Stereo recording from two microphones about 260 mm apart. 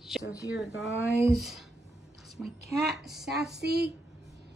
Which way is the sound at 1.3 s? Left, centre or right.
Centre.